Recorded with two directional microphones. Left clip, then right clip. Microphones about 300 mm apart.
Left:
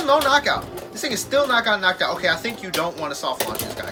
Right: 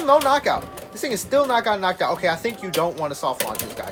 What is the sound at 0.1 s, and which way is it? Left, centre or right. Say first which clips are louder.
Speech: right 1 dB; centre.